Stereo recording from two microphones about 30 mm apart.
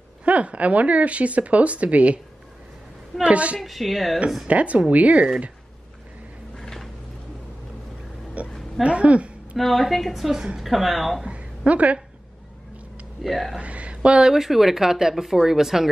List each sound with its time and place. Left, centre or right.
0.2 s speech: right
3.3 s speech: right
3.5 s a woman's voice: centre
4.5 s speech: right
6.5 s a sound: centre
8.4 s a sound: right
8.8 s a woman's voice: right
9.6 s a woman's voice: centre
11.2 s a sound: right
13.2 s a woman's voice: centre
13.6 s speech: right
14.0 s speech: right
14.3 s speech: centre